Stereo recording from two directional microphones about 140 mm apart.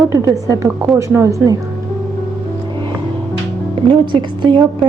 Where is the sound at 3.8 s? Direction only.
35° right (ahead or behind).